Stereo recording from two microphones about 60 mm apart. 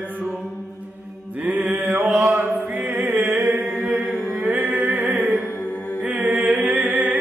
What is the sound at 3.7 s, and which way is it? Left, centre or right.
Mantra, right.